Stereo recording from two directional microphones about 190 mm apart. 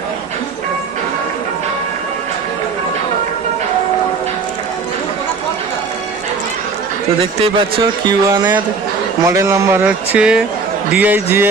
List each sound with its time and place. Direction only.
8.0 s speech: 20° right (ahead or behind)